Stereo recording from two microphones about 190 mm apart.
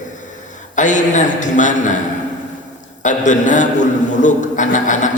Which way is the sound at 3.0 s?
40° left (ahead or behind).